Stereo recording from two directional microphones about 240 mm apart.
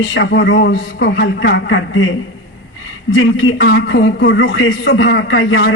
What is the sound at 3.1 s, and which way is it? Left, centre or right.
A man's voice, left.